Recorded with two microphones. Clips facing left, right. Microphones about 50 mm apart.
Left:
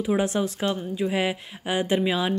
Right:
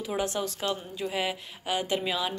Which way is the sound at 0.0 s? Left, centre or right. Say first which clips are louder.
Left 6 dB; left.